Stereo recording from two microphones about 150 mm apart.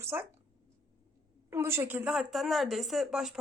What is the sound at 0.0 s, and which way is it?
Speech, 15° right (ahead or behind).